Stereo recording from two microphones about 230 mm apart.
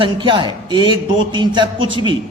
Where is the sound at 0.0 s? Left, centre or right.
Right.